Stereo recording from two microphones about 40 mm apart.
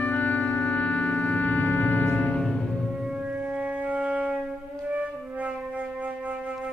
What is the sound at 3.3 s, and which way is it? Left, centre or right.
Music, right.